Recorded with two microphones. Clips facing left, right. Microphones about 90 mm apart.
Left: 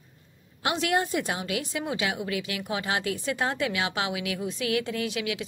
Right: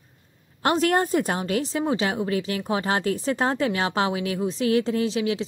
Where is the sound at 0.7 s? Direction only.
45° right (ahead or behind).